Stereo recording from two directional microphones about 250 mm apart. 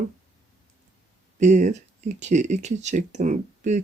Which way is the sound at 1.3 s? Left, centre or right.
Right.